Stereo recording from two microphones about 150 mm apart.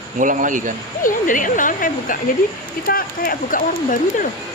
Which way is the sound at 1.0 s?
60° left (ahead or behind).